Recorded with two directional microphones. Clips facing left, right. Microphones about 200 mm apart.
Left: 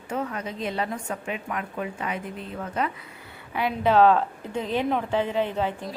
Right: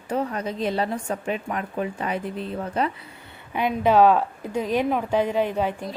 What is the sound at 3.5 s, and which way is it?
A woman's voice, 15° right (ahead or behind).